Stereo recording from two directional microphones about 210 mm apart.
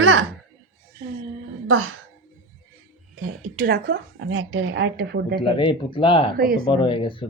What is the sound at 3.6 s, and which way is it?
A woman's voice, 55° right (ahead or behind).